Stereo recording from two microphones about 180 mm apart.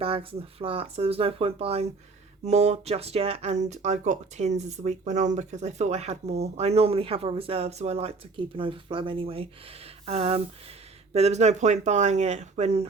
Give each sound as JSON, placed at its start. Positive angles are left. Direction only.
{"t": 0.0, "sound": "speech", "side_deg": -30}